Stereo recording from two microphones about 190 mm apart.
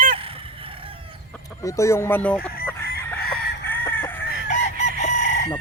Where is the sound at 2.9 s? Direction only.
55° left (ahead or behind).